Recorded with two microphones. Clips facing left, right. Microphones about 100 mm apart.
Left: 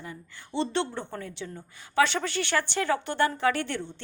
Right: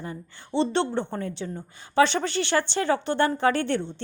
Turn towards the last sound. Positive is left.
turn(degrees=-30)  # may be behind; listen again after turning